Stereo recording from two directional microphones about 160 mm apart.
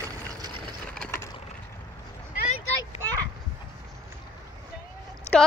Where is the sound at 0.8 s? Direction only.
10° left (ahead or behind).